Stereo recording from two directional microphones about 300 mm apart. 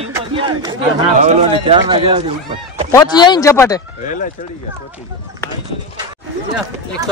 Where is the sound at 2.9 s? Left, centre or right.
Centre.